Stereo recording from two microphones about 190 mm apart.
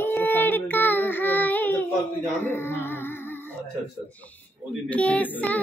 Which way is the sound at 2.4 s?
10° left (ahead or behind).